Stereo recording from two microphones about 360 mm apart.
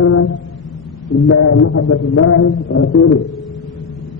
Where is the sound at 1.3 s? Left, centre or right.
Left.